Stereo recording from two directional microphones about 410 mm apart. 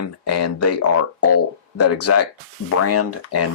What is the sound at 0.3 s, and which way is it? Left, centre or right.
Speech, left.